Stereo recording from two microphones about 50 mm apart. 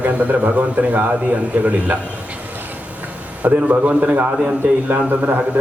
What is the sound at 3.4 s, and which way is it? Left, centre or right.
A man's voice, right.